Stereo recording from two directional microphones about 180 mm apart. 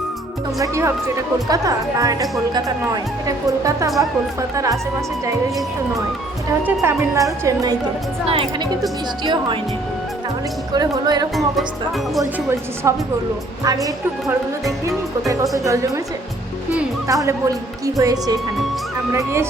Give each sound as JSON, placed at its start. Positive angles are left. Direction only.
{"t": 0.6, "sound": "speech", "side_deg": -15}
{"t": 6.7, "sound": "speech", "side_deg": -15}
{"t": 8.3, "sound": "a woman's voice", "side_deg": -30}
{"t": 10.7, "sound": "speech", "side_deg": -20}
{"t": 17.1, "sound": "speech", "side_deg": -20}